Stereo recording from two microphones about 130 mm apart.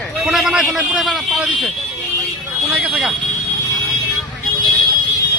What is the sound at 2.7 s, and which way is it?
Speech, 10° right (ahead or behind).